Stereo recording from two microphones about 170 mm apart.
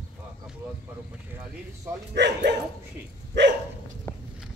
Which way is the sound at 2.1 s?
90° right.